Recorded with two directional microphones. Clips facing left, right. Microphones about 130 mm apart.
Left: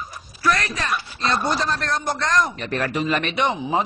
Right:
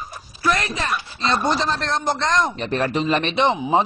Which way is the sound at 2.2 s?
Centre (ahead or behind).